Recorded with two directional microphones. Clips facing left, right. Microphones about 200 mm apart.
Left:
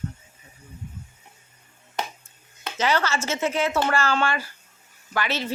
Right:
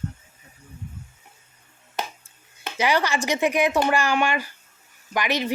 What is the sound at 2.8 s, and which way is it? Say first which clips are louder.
A woman's voice: right 1 dB; 15° right (ahead or behind).